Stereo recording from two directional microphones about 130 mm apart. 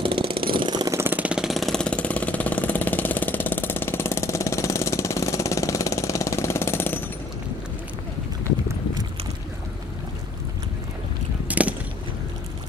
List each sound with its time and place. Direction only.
0.0 s vehicle: 40° right (ahead or behind)
0.9 s vehicle: 15° right (ahead or behind); by 7.0 s 15° left (ahead or behind)
11.4 s a sound: 10° right (ahead or behind)